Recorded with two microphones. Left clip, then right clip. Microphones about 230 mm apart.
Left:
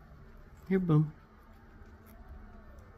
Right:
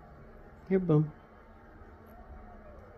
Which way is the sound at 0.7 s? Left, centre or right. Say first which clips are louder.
Right 3 dB; left.